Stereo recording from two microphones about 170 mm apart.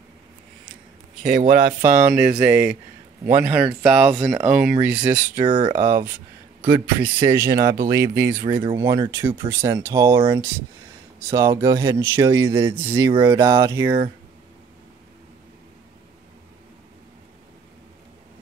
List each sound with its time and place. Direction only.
1.2 s speech: 55° right (ahead or behind)
2.0 s speech: 10° right (ahead or behind)
5.4 s speech: 30° right (ahead or behind)
5.8 s speech: 15° right (ahead or behind)
8.6 s speech: 25° right (ahead or behind)
11.3 s speech: 20° right (ahead or behind)